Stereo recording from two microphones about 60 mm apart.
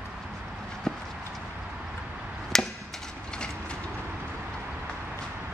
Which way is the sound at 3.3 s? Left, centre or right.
Centre.